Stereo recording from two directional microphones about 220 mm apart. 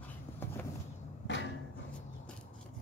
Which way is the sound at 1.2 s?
55° left (ahead or behind).